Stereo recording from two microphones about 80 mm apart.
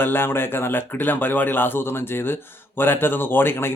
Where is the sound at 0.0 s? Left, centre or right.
Left.